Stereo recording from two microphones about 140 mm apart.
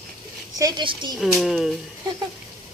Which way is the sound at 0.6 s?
30° right (ahead or behind).